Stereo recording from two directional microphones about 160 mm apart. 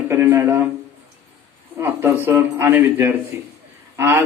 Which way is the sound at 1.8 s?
15° right (ahead or behind).